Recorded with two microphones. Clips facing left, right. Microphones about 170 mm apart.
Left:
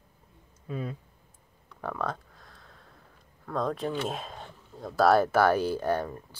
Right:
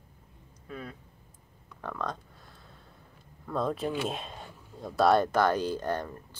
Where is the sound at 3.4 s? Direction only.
5° right (ahead or behind).